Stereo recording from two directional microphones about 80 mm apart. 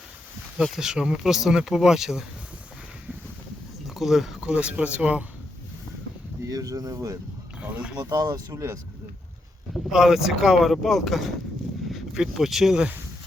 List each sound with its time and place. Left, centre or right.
0.6 s speech: centre
3.8 s speech: centre
6.5 s speech: right
9.7 s speech: centre